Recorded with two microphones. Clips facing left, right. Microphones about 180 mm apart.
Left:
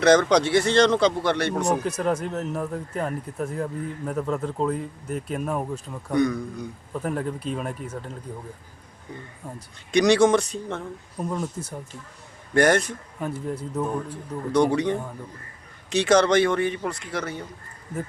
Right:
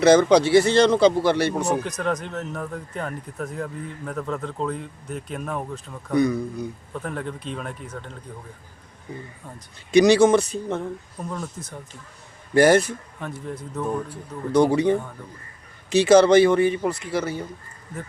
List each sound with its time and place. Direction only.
0.0 s speech: 5° right (ahead or behind)
6.1 s speech: 5° right (ahead or behind)
7.0 s a man's voice: 5° left (ahead or behind)
9.9 s speech: 5° right (ahead or behind)
11.2 s a man's voice: 15° left (ahead or behind)
12.5 s speech: 5° right (ahead or behind)
13.1 s a man's voice: 10° left (ahead or behind)
14.1 s speech: 10° right (ahead or behind)